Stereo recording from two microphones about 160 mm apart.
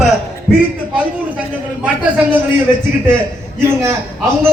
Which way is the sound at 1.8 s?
10° right (ahead or behind).